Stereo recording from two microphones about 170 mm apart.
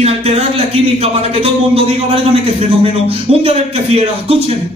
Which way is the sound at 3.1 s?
35° right (ahead or behind).